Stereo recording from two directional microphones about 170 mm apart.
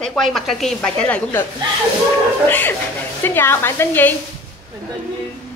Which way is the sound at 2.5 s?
10° left (ahead or behind).